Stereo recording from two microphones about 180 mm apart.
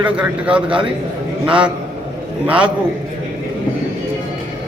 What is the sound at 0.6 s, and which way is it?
Speech, 30° right (ahead or behind).